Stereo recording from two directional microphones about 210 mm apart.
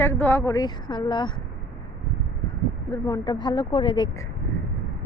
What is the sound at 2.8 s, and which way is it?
Speech, 15° left (ahead or behind).